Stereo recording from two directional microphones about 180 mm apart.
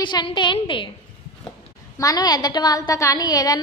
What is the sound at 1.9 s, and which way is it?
A woman's voice, 20° left (ahead or behind).